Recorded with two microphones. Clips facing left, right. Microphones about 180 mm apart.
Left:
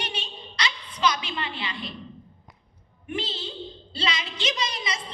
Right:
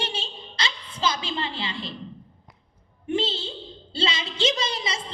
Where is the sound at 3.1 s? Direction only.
25° right (ahead or behind).